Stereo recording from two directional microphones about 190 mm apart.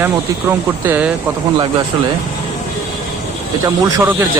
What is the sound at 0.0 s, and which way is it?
Speech, 10° right (ahead or behind).